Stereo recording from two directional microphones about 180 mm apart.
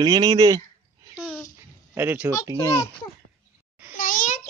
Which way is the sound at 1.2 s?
Centre (ahead or behind).